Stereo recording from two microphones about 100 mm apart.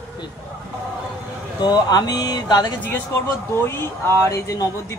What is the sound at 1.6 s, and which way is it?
Speech, 45° left (ahead or behind).